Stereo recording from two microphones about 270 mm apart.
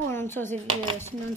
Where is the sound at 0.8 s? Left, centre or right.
Centre.